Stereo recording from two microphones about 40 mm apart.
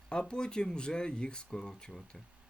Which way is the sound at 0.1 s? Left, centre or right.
Left.